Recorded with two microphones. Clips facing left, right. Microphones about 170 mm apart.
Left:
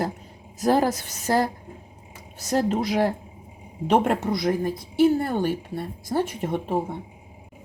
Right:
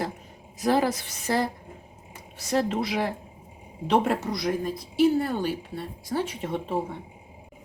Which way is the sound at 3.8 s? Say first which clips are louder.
Left 3 dB; 55° left (ahead or behind).